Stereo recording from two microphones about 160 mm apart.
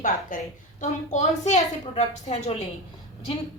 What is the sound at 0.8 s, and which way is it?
A woman's voice, 45° left (ahead or behind).